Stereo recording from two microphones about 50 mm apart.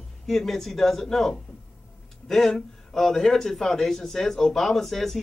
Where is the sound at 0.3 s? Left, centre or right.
Centre.